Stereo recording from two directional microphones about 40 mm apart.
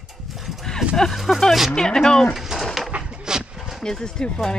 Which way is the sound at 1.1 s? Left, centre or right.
Centre.